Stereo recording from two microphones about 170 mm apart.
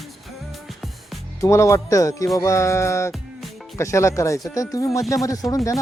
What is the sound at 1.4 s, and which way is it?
Speech, 15° left (ahead or behind).